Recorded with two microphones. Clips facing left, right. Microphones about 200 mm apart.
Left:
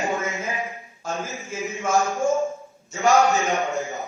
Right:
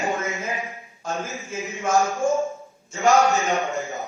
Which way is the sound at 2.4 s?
15° left (ahead or behind).